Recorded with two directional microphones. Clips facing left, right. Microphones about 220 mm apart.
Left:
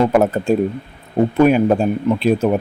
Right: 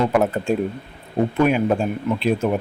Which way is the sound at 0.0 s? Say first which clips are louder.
Left 4 dB; 40° left (ahead or behind).